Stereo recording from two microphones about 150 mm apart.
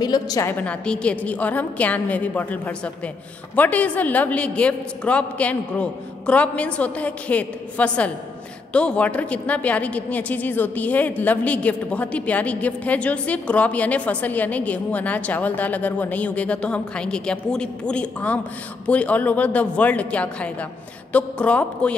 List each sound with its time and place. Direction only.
0.0 s a woman's voice: 25° left (ahead or behind)
0.5 s a woman's voice: 10° left (ahead or behind)